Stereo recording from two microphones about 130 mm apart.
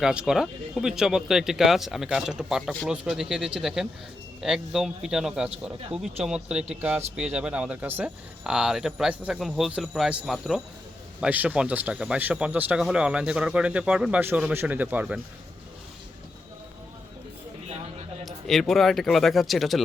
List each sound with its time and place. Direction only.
0.0 s speech: 5° right (ahead or behind)
18.3 s speech: centre (ahead or behind)